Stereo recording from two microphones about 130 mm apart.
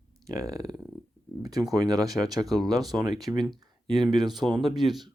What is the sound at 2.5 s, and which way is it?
Speech, centre (ahead or behind).